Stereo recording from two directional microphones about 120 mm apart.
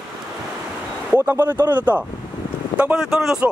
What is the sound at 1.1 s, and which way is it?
Speech, 20° right (ahead or behind).